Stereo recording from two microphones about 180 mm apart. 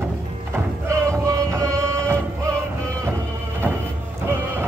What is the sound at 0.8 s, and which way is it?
Music, 15° right (ahead or behind).